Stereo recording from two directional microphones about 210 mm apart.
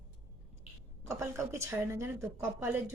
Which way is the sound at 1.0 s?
15° right (ahead or behind).